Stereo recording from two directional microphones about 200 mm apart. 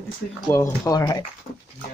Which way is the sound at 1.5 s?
45° left (ahead or behind).